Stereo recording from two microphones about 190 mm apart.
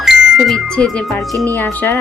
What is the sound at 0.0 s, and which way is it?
Speech, centre (ahead or behind).